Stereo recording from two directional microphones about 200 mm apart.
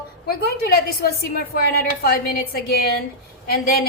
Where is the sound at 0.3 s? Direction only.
50° left (ahead or behind).